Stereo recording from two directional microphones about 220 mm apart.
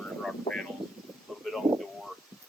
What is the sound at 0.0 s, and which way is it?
Vehicle, 5° left (ahead or behind).